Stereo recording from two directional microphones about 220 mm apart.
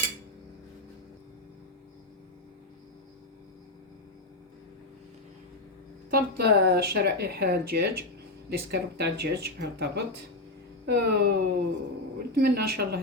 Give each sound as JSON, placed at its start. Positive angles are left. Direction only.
{"t": 6.1, "sound": "speech", "side_deg": -45}